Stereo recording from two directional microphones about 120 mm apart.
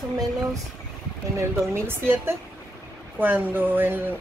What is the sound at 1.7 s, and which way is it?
A woman's voice, 20° right (ahead or behind).